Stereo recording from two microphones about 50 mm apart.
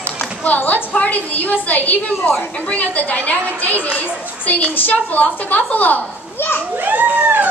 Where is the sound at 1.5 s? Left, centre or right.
Left.